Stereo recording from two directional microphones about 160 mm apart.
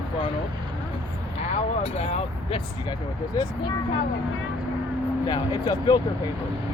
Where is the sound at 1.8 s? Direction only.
40° left (ahead or behind).